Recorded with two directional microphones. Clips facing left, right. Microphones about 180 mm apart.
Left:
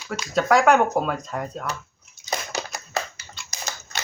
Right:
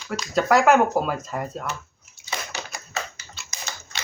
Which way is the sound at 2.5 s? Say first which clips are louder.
Left 5 dB; 40° left (ahead or behind).